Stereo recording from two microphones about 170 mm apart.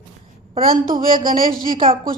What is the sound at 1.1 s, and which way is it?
Speech, 55° right (ahead or behind).